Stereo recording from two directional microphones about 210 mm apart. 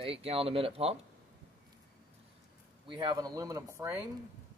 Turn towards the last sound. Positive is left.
turn(degrees=-10)  # may be behind; listen again after turning